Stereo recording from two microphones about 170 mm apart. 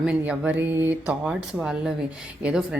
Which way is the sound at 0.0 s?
10° right (ahead or behind).